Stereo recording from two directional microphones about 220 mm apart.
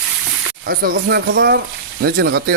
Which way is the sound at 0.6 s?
50° right (ahead or behind).